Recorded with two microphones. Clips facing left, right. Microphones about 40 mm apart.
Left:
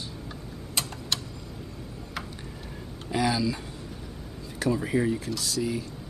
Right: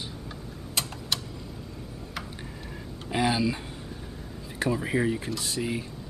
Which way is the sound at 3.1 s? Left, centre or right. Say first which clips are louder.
Even; right.